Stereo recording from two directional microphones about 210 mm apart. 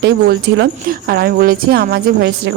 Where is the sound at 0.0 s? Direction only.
50° right (ahead or behind).